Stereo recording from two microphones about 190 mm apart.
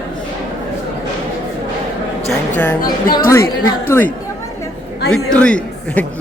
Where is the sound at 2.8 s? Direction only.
50° left (ahead or behind).